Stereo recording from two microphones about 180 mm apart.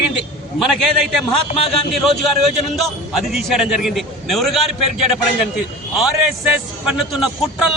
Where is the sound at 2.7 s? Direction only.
Centre (ahead or behind).